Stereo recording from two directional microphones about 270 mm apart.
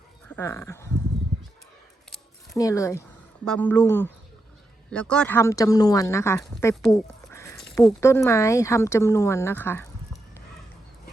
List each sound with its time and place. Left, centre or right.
0.3 s speech: centre
2.6 s a woman's voice: centre